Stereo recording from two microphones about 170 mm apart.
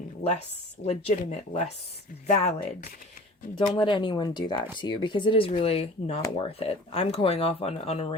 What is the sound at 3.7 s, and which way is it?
Speech, 30° left (ahead or behind).